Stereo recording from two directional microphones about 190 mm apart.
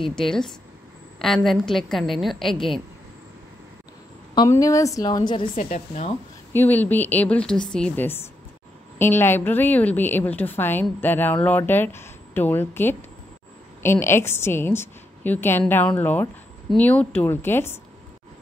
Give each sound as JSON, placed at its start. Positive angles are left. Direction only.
{"t": 0.0, "sound": "a woman's voice", "side_deg": 0}
{"t": 4.4, "sound": "a woman's voice", "side_deg": 15}
{"t": 5.6, "sound": "speech", "side_deg": 40}
{"t": 6.5, "sound": "a woman's voice", "side_deg": 10}